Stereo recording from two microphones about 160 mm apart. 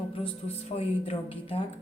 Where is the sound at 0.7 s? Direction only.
40° left (ahead or behind).